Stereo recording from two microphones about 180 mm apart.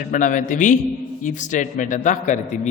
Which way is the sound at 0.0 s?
45° left (ahead or behind).